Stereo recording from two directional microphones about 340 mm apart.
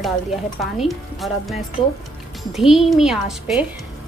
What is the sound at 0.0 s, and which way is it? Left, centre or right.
Speech, centre.